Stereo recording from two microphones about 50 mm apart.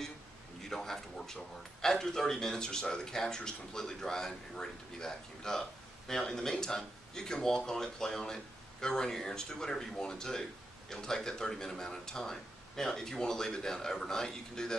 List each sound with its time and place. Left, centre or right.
0.7 s a man's voice: centre